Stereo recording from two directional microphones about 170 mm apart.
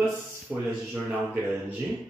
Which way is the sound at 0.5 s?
5° right (ahead or behind).